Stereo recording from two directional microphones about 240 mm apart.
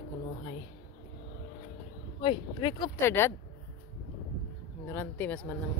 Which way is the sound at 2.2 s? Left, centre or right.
Left.